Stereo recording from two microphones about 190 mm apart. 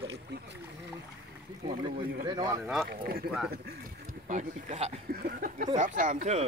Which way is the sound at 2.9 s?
50° right (ahead or behind).